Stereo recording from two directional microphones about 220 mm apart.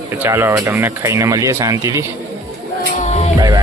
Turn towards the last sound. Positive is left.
turn(degrees=30)  # may be behind; listen again after turning